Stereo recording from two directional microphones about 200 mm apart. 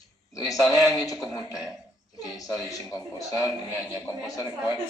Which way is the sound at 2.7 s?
20° left (ahead or behind).